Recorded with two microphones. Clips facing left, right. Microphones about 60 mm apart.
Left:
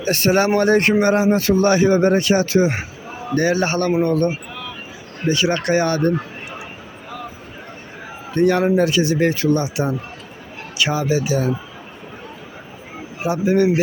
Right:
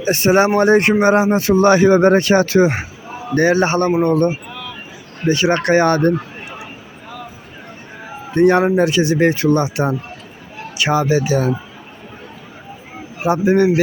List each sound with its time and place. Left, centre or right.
0.0 s speech: right
8.3 s a man's voice: right
13.2 s speech: right